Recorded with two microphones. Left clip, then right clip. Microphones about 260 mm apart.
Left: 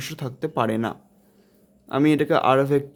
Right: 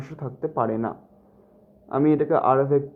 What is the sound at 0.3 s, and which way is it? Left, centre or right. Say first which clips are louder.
Speech: even; left.